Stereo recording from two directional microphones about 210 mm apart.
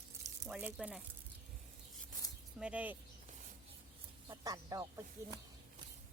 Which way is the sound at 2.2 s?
15° left (ahead or behind).